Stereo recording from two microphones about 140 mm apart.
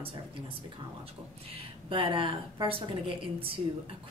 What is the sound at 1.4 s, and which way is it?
A woman's voice, 40° right (ahead or behind).